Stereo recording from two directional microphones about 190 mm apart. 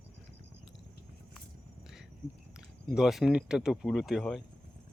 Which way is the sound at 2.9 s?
Centre (ahead or behind).